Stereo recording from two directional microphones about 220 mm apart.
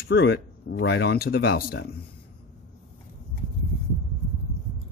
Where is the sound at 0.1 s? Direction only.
50° left (ahead or behind).